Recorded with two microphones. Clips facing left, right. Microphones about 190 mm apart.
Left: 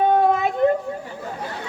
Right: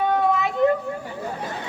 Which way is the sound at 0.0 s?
45° left (ahead or behind).